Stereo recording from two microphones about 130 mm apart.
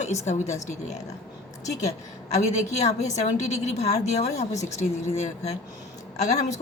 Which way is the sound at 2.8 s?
60° left (ahead or behind).